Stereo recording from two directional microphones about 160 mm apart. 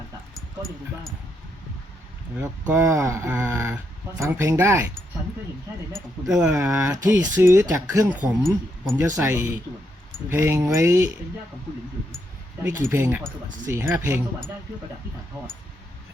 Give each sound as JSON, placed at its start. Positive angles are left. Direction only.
{"t": 0.3, "sound": "speech", "side_deg": 0}
{"t": 2.4, "sound": "speech", "side_deg": -20}
{"t": 5.9, "sound": "speech", "side_deg": -5}
{"t": 6.5, "sound": "speech", "side_deg": -15}
{"t": 8.4, "sound": "speech", "side_deg": 0}
{"t": 9.0, "sound": "speech", "side_deg": -10}
{"t": 12.6, "sound": "speech", "side_deg": -15}